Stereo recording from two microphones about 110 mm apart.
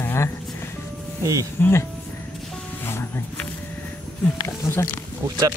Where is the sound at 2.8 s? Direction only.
20° left (ahead or behind).